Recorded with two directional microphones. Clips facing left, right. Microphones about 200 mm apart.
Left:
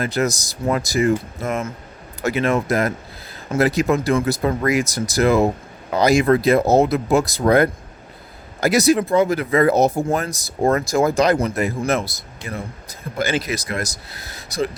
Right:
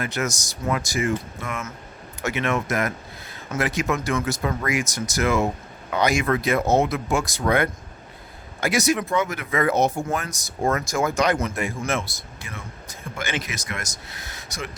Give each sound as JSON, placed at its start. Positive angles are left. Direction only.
{"t": 0.0, "sound": "speech", "side_deg": 35}